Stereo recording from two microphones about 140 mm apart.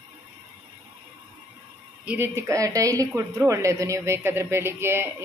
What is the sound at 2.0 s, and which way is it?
A woman's voice, 15° right (ahead or behind).